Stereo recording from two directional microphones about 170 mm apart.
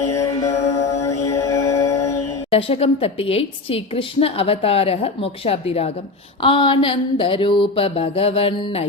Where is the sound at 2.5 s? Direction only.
35° left (ahead or behind).